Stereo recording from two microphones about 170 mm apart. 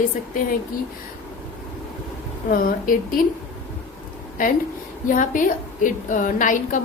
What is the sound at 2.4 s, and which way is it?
Speech, 55° left (ahead or behind).